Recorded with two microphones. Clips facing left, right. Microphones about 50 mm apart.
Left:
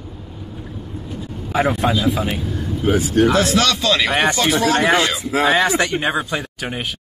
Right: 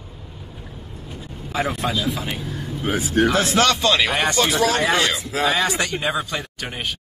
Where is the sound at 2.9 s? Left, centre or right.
Right.